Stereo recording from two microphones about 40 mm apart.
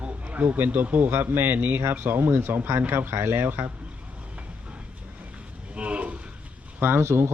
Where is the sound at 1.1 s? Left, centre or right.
Right.